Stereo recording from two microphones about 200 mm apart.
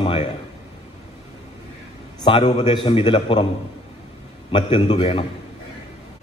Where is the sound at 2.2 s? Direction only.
30° left (ahead or behind).